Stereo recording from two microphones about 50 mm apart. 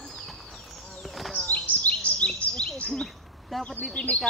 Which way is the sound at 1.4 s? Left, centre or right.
Left.